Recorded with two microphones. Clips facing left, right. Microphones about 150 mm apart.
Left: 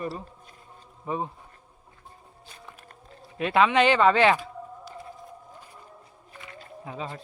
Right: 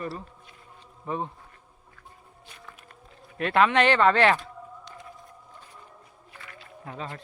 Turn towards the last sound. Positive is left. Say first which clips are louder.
# left 2 dB
turn(degrees=5)  # may be behind; listen again after turning